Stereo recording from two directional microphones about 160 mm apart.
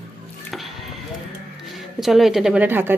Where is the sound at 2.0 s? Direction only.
Centre (ahead or behind).